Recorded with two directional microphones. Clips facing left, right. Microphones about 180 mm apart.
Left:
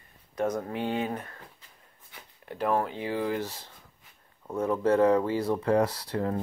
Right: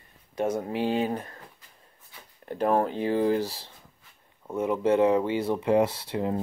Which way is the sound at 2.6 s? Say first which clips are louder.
Right 4 dB; 30° right (ahead or behind).